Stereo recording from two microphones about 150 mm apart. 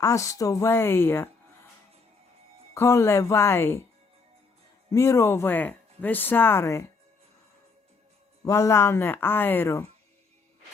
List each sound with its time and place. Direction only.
0.0 s speech: 20° left (ahead or behind)
2.7 s speech: 15° left (ahead or behind)
4.9 s speech: 20° left (ahead or behind)
8.4 s speech: 20° left (ahead or behind)